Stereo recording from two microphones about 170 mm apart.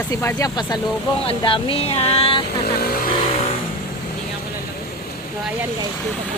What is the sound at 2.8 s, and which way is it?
Vehicle, 60° left (ahead or behind).